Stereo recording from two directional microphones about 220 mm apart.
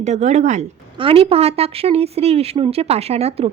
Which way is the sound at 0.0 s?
30° right (ahead or behind).